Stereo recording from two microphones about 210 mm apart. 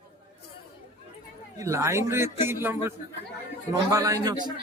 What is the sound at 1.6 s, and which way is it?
Speech, 15° right (ahead or behind).